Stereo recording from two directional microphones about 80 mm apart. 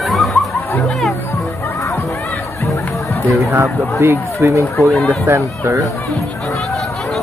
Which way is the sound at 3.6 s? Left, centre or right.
Right.